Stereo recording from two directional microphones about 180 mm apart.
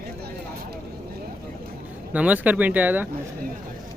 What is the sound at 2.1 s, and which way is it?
Speech, 5° right (ahead or behind).